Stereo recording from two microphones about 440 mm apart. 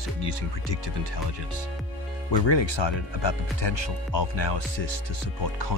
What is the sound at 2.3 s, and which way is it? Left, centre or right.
Speech, left.